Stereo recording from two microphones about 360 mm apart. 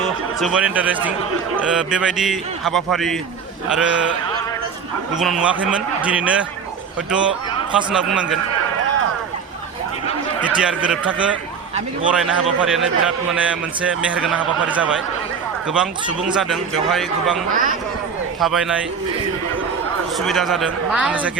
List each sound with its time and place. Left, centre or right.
0.3 s a man's voice: centre
5.1 s a man's voice: centre
7.7 s a man's voice: centre
10.4 s a man's voice: centre
17.5 s a man's voice: right
18.3 s a man's voice: centre
20.1 s a man's voice: centre